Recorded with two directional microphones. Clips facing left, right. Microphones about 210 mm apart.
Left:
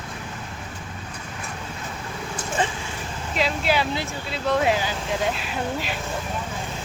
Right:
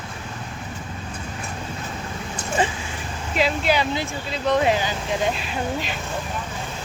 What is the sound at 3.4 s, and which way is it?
Speech, centre (ahead or behind).